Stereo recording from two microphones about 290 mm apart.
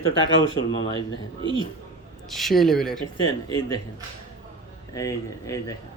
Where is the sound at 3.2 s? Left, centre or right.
Centre.